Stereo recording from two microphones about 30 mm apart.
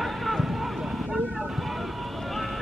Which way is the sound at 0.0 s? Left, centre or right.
Centre.